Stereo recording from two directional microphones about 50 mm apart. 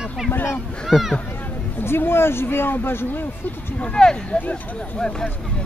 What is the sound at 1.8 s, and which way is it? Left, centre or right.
Speech, left.